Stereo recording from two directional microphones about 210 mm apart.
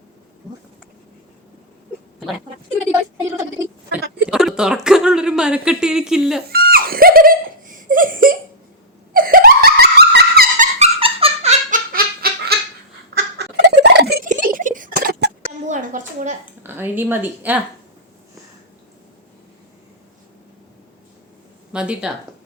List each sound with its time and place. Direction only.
4.3 s speech: 5° right (ahead or behind)
6.5 s giggle: 45° right (ahead or behind)
9.1 s wail: 45° right (ahead or behind)
10.8 s squeak: 30° right (ahead or behind)
11.7 s a sound: 45° right (ahead or behind)
13.1 s turkey: 50° right (ahead or behind)
14.3 s a sound: 40° right (ahead or behind)
16.6 s a woman's voice: 10° right (ahead or behind)
21.7 s speech: 5° right (ahead or behind)